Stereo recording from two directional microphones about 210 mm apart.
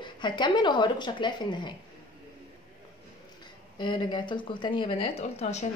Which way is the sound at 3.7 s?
20° left (ahead or behind).